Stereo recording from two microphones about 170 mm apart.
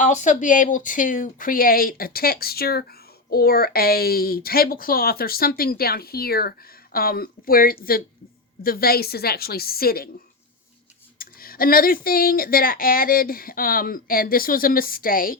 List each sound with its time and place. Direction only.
0.0 s speech: 45° left (ahead or behind); by 10.1 s 60° left (ahead or behind)
11.2 s speech: 60° left (ahead or behind)